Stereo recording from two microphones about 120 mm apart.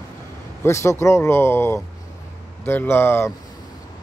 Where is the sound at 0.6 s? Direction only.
25° left (ahead or behind).